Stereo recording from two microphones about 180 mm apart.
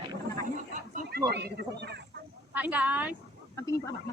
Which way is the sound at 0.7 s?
45° right (ahead or behind).